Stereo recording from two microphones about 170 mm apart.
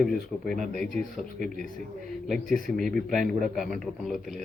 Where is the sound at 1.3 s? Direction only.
50° right (ahead or behind).